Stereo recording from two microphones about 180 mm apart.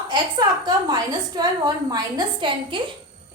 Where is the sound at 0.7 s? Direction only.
20° right (ahead or behind).